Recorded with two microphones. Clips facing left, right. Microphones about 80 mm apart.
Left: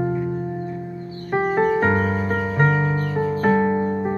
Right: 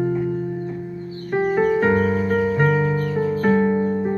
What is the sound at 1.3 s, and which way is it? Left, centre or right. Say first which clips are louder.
Music: right 1 dB; left.